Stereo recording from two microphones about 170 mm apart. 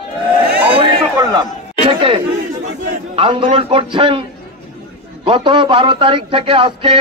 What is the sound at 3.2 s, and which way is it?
A man's voice, 30° right (ahead or behind).